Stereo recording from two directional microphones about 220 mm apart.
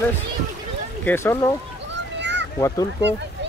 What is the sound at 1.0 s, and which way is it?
Speech, 10° left (ahead or behind).